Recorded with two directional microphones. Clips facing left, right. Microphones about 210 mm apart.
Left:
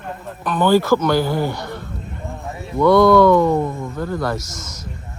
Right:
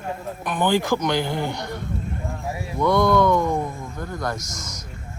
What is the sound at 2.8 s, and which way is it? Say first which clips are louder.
Speech: left 7 dB; 20° right (ahead or behind).